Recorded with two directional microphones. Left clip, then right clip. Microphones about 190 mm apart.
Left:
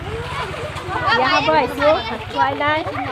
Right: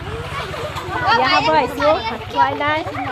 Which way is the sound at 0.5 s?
25° right (ahead or behind).